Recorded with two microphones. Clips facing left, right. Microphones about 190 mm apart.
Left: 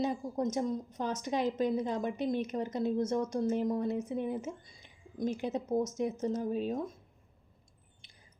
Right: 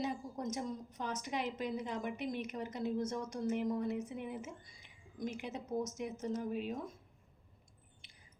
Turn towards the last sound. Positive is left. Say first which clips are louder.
# left 5 dB
turn(degrees=35)  # may be behind; listen again after turning